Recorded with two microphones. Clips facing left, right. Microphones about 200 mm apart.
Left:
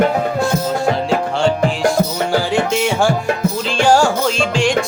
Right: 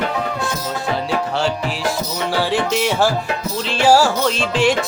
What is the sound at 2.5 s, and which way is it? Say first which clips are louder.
Music: left 2 dB; centre (ahead or behind).